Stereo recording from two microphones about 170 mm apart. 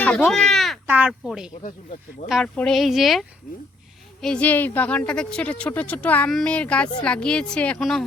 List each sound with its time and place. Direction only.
0.0 s a sound: 10° left (ahead or behind)
0.9 s speech: 10° right (ahead or behind)
1.6 s speech: 50° left (ahead or behind)
2.3 s speech: 5° left (ahead or behind)